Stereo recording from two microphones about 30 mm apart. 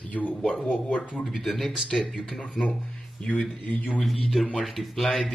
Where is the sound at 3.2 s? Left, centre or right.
Left.